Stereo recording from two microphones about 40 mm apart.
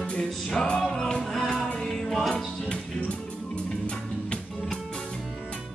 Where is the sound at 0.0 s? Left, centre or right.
Left; by 2.4 s centre.